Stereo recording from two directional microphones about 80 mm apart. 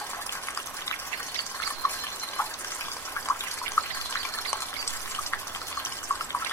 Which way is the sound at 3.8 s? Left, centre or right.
Left.